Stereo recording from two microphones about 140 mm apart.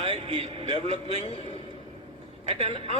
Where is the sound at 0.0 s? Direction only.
45° right (ahead or behind).